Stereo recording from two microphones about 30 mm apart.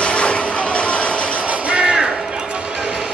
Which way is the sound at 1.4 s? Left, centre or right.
Right.